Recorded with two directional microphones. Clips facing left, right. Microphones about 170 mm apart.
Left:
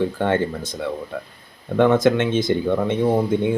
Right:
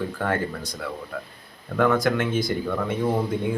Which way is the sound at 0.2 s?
25° left (ahead or behind).